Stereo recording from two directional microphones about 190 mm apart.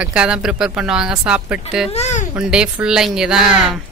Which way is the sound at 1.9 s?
35° left (ahead or behind).